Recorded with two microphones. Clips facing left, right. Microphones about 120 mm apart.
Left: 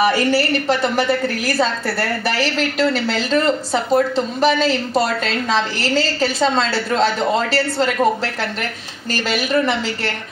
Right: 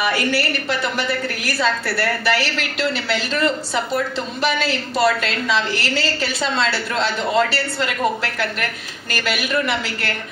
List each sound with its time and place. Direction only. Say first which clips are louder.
0.0 s a woman's voice: left 4 dB; 35° left (ahead or behind)